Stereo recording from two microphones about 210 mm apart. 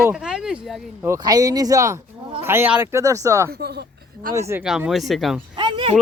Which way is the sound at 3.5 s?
50° right (ahead or behind).